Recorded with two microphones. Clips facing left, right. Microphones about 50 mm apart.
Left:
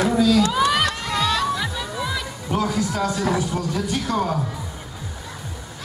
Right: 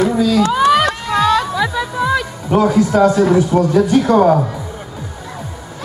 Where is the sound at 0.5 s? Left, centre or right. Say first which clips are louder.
Right 7 dB; right.